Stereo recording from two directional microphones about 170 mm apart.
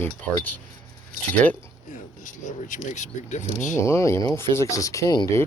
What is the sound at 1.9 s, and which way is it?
Speech, 50° left (ahead or behind).